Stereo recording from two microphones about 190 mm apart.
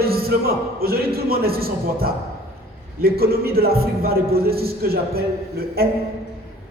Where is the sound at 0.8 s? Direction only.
55° right (ahead or behind).